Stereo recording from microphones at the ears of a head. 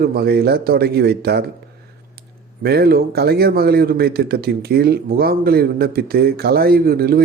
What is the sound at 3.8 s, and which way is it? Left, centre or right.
Speech, right.